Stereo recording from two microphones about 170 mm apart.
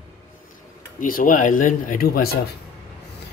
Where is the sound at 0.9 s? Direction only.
55° left (ahead or behind).